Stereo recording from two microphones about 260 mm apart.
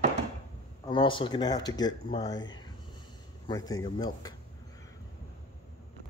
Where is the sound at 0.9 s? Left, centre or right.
Centre.